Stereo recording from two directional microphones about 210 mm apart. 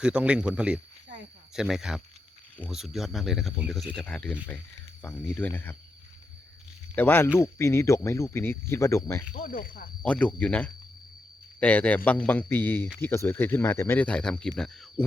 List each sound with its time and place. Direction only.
0.0 s speech: 5° right (ahead or behind)
6.9 s speech: 10° left (ahead or behind)
9.3 s speech: 40° left (ahead or behind)
10.0 s speech: 5° left (ahead or behind)